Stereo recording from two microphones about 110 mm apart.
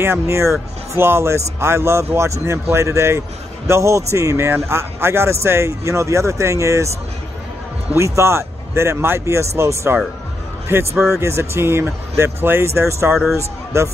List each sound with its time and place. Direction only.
0.0 s speech: 25° right (ahead or behind)
7.9 s speech: 25° right (ahead or behind)